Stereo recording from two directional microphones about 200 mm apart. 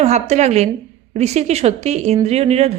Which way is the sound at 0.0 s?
35° right (ahead or behind).